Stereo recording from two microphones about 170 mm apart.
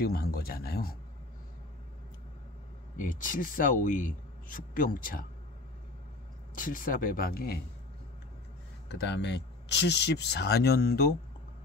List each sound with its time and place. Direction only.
0.0 s speech: 65° left (ahead or behind)
3.0 s a man's voice: 50° left (ahead or behind)
6.5 s speech: 55° left (ahead or behind)
8.8 s speech: 90° left; by 11.1 s 65° left (ahead or behind)